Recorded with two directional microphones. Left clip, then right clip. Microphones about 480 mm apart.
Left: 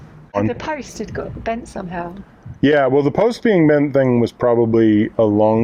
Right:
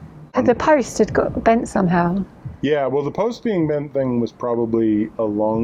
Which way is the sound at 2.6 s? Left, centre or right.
Left.